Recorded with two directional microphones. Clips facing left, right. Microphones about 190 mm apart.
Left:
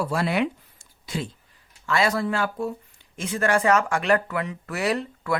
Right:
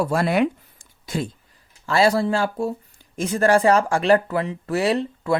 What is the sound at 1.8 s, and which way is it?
Speech, 30° right (ahead or behind).